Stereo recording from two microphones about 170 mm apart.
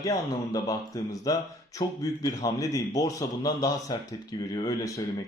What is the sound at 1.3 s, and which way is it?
Speech, 20° left (ahead or behind).